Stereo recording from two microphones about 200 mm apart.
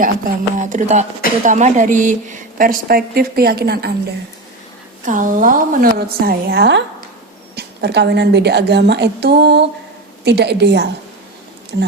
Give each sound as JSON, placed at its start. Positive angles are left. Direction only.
{"t": 0.6, "sound": "a woman's voice", "side_deg": -35}
{"t": 5.0, "sound": "a woman's voice", "side_deg": -40}